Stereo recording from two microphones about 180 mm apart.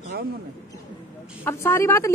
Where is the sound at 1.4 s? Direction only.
15° left (ahead or behind).